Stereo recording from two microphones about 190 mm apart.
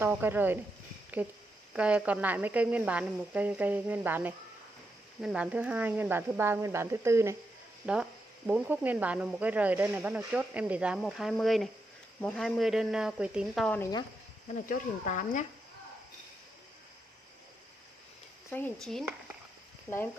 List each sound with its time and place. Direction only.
0.0 s speech: 10° right (ahead or behind)
1.7 s speech: 5° right (ahead or behind)
14.7 s speech: 40° left (ahead or behind)
18.5 s speech: 5° left (ahead or behind)